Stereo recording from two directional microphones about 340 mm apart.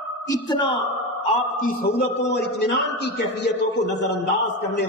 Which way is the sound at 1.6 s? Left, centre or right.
Left.